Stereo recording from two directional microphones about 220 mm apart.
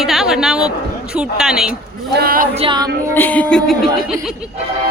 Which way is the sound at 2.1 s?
40° right (ahead or behind).